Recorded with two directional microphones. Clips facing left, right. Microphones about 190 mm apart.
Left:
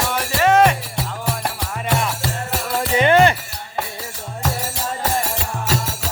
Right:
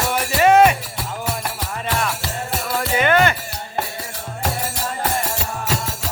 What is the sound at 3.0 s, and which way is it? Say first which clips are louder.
Music: left 3 dB; 30° left (ahead or behind).